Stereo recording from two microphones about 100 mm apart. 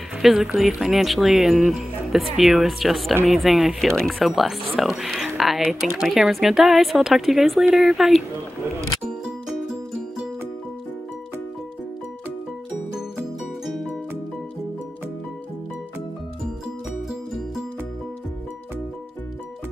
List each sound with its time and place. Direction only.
0.2 s speech: 5° right (ahead or behind)